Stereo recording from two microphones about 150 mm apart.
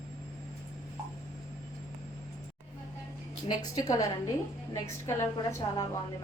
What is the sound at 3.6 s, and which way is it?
A woman's voice, 25° left (ahead or behind).